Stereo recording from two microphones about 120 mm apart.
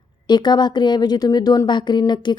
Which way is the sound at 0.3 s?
40° left (ahead or behind).